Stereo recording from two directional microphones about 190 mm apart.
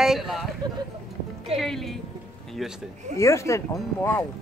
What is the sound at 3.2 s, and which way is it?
Speech, 15° left (ahead or behind).